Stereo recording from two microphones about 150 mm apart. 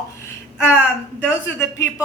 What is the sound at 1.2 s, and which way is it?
Speech, 15° left (ahead or behind).